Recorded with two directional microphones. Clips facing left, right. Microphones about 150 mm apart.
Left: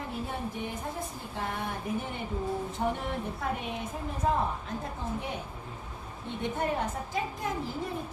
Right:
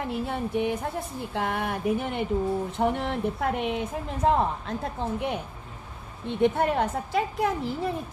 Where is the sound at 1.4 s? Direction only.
85° right.